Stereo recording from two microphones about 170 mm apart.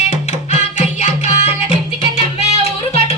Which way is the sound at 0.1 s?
45° left (ahead or behind).